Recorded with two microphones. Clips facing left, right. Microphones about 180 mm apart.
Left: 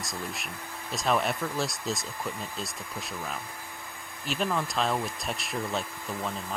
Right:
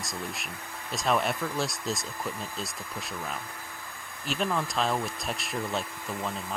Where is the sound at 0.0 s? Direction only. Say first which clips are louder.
Even; centre (ahead or behind).